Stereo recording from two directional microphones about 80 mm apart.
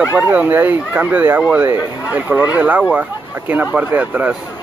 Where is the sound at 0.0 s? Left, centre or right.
Right.